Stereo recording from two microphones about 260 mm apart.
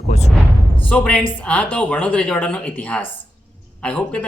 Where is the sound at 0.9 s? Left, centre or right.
Centre.